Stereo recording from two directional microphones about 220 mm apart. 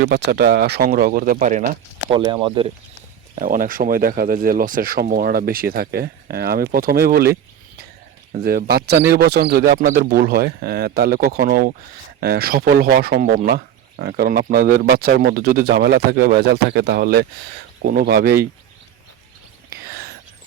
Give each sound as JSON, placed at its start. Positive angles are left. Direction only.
{"t": 0.0, "sound": "speech", "side_deg": -50}
{"t": 2.0, "sound": "speech", "side_deg": -20}
{"t": 3.3, "sound": "speech", "side_deg": -40}
{"t": 19.7, "sound": "whispering", "side_deg": -45}